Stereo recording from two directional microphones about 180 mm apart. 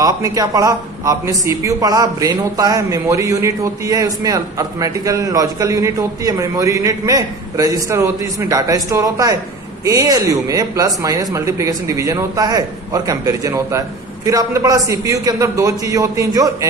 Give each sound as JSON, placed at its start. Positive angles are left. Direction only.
{"t": 0.0, "sound": "a man's voice", "side_deg": -20}